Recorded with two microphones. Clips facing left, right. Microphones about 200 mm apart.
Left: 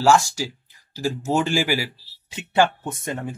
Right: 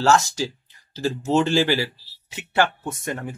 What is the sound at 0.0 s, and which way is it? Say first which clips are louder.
Speech: left 1 dB; 10° left (ahead or behind).